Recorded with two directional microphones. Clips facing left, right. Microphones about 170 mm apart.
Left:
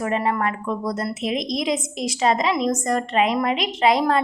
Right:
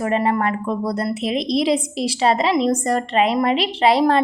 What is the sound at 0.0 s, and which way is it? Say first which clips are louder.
A woman's voice: right 3 dB; 30° right (ahead or behind).